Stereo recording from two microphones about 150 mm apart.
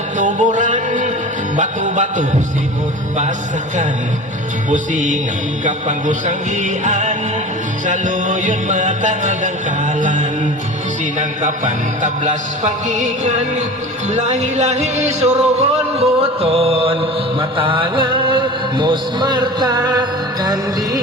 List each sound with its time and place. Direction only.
0.2 s music: 55° right (ahead or behind)
4.7 s music: 55° right (ahead or behind); by 21.0 s 25° right (ahead or behind)